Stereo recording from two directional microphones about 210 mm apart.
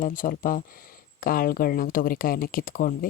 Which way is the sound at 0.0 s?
40° left (ahead or behind).